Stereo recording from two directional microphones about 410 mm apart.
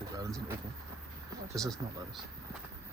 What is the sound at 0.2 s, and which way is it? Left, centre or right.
Vehicle, centre.